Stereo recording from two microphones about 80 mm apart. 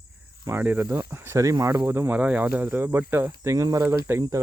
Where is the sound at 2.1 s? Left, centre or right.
Centre; by 4.5 s right.